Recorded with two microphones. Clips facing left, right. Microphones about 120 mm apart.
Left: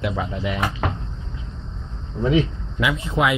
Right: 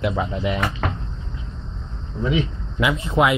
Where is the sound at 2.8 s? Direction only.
35° right (ahead or behind).